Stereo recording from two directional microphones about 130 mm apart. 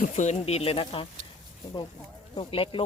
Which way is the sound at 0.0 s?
65° left (ahead or behind).